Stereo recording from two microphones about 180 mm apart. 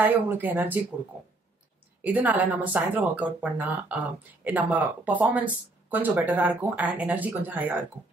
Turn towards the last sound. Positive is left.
turn(degrees=-10)  # may be behind; listen again after turning